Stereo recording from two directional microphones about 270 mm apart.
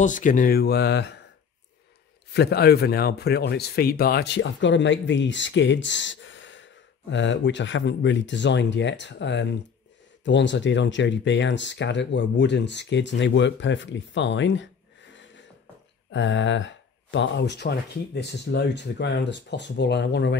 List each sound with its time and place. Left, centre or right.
0.0 s speech: left
2.3 s speech: left